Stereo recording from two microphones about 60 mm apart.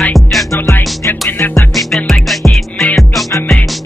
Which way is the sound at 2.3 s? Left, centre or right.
Centre.